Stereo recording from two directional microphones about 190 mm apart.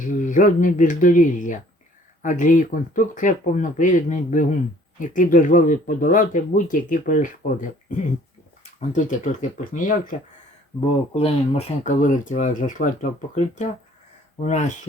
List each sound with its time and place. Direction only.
0.0 s speech: 40° left (ahead or behind)
8.8 s speech: 40° left (ahead or behind)